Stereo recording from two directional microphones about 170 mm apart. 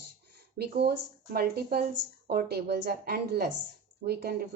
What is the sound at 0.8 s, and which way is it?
Speech, 65° right (ahead or behind).